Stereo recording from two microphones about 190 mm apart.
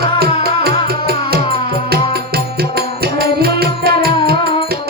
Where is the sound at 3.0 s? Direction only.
55° right (ahead or behind).